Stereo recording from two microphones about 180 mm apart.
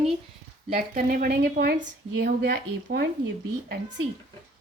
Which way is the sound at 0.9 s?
55° right (ahead or behind).